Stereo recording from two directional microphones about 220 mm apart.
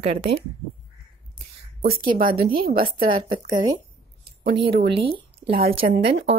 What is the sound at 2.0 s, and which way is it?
Speech, 40° right (ahead or behind).